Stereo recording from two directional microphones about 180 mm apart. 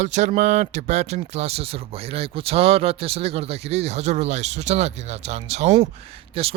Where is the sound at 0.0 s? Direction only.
40° right (ahead or behind).